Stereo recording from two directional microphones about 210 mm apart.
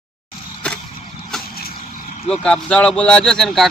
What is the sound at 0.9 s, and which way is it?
Vehicle, 30° left (ahead or behind).